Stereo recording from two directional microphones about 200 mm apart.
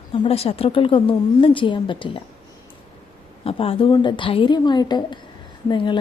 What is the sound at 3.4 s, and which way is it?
A woman's voice, 30° left (ahead or behind).